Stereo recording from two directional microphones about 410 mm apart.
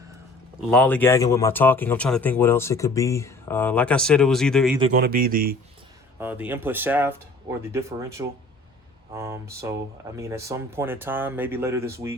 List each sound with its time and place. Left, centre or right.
0.7 s speech: centre
4.8 s speech: right
6.1 s speech: centre